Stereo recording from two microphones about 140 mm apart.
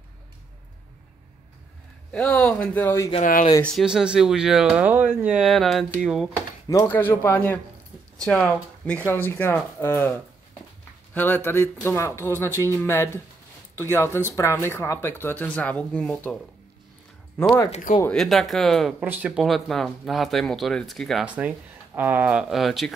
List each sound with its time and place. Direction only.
2.1 s speech: 10° left (ahead or behind)
3.2 s speech: 75° left (ahead or behind)
3.6 s speech: centre (ahead or behind)
6.7 s speech: 15° left (ahead or behind)
11.1 s speech: 15° left (ahead or behind)
17.6 s speech: 55° left (ahead or behind)
18.1 s speech: centre (ahead or behind)
18.9 s speech: 10° right (ahead or behind)
21.3 s speech: 10° right (ahead or behind)